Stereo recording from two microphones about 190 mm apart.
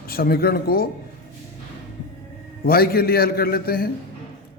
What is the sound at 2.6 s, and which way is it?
A man's voice, 55° left (ahead or behind).